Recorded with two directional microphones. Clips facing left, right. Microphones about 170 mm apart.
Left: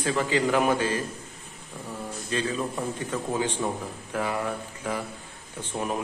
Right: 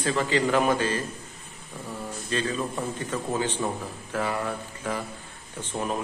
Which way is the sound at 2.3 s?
10° left (ahead or behind).